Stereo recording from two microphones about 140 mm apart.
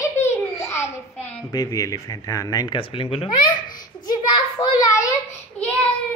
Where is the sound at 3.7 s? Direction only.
30° left (ahead or behind).